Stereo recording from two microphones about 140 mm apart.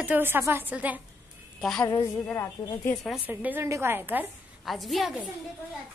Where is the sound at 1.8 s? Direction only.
30° left (ahead or behind).